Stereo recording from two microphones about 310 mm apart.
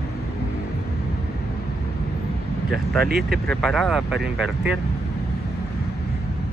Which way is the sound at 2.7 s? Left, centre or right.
Centre.